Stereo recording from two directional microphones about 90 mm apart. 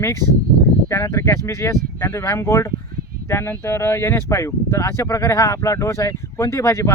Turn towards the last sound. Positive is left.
turn(degrees=30)  # may be behind; listen again after turning